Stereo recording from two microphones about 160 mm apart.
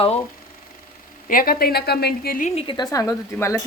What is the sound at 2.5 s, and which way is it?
A woman's voice, 30° left (ahead or behind).